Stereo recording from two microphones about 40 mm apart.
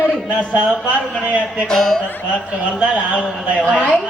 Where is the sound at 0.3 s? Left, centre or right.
Right.